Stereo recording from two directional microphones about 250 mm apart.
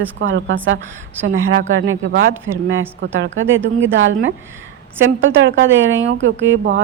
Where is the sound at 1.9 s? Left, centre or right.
Right.